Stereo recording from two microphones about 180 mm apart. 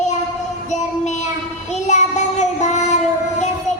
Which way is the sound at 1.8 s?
40° left (ahead or behind).